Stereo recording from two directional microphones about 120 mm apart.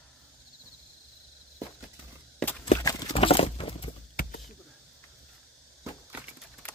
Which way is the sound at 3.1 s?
50° left (ahead or behind).